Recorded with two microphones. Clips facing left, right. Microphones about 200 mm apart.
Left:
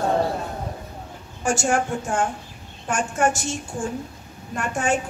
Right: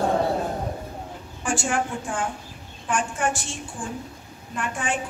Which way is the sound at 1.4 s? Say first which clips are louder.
Left 4 dB; 45° left (ahead or behind).